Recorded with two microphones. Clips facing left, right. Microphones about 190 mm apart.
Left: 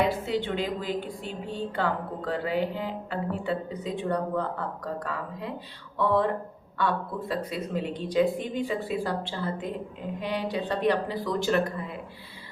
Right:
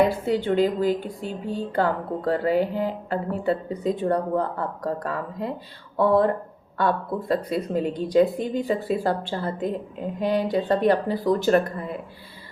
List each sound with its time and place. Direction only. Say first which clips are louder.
0.4 s speech: right 9 dB; 45° right (ahead or behind)